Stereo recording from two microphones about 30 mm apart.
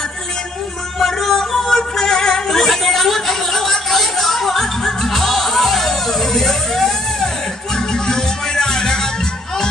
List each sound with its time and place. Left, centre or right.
0.9 s yodeling: centre
1.8 s music: centre
2.6 s a sound: centre
7.9 s music: left